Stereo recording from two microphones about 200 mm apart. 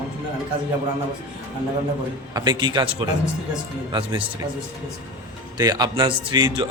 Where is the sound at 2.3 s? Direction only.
20° right (ahead or behind).